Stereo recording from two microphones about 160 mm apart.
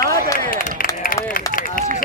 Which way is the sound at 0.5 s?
60° left (ahead or behind).